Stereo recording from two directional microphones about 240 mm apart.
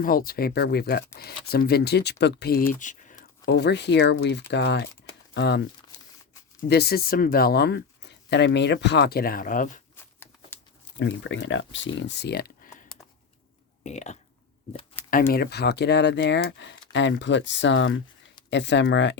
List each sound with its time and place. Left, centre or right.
0.0 s speech: left
2.8 s a sound: left
3.4 s speech: left
6.7 s speech: left
9.9 s a sound: centre
10.9 s speech: left
13.8 s speech: left
15.0 s a sound: centre
15.3 s speech: left